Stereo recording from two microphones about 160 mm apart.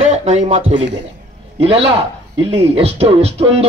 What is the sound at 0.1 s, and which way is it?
Speech, 45° right (ahead or behind).